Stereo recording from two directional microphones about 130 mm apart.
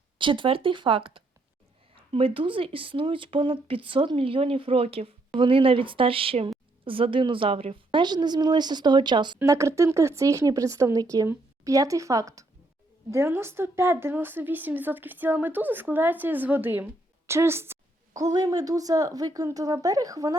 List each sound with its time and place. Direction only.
0.2 s a woman's voice: 40° right (ahead or behind)
9.4 s a woman's voice: 25° right (ahead or behind)